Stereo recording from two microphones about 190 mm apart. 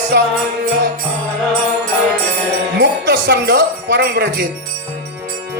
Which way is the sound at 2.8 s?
60° right (ahead or behind).